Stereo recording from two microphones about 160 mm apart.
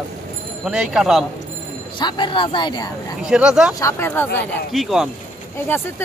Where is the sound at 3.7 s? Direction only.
15° left (ahead or behind).